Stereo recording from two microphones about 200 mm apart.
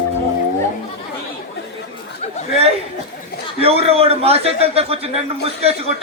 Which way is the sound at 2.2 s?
35° left (ahead or behind).